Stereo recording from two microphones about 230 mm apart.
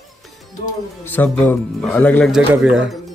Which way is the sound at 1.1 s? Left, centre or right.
Centre.